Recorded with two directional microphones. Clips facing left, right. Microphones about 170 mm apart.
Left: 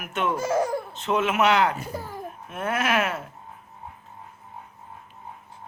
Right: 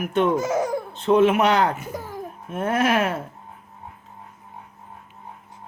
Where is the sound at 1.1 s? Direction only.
30° right (ahead or behind).